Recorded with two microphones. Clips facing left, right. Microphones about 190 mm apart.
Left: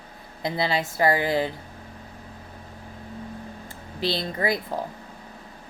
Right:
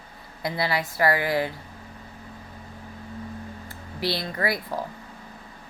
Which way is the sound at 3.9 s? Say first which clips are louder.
Left 1 dB; 25° left (ahead or behind).